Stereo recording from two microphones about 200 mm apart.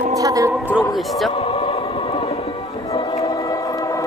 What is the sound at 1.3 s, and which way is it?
Choir, 30° left (ahead or behind).